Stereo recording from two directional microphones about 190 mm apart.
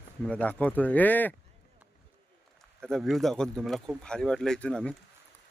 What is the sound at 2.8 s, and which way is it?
Speech, centre (ahead or behind).